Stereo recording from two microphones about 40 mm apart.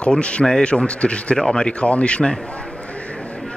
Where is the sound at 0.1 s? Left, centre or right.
Left.